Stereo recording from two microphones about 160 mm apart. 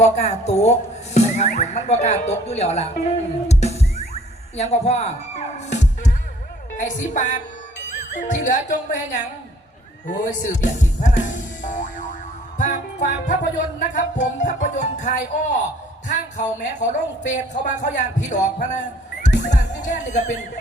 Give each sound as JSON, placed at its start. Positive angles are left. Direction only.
{"t": 0.0, "sound": "music", "side_deg": 45}
{"t": 3.5, "sound": "a sound", "side_deg": 40}
{"t": 5.5, "sound": "music", "side_deg": 45}
{"t": 7.9, "sound": "speech", "side_deg": 50}
{"t": 12.5, "sound": "music", "side_deg": 50}
{"t": 19.2, "sound": "speech", "side_deg": 50}